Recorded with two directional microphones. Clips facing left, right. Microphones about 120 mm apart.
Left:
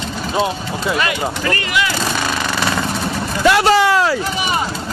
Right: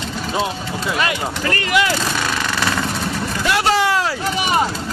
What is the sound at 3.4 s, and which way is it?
Vehicle, 90° left.